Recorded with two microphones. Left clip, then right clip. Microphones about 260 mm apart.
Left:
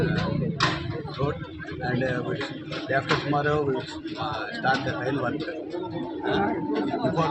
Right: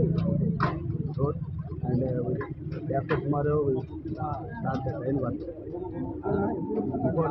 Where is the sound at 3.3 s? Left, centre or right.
Centre.